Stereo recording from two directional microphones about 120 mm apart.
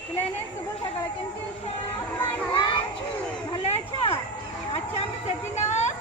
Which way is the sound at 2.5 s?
45° left (ahead or behind).